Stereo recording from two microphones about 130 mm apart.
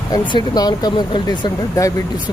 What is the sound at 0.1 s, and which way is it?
Speech, 35° left (ahead or behind).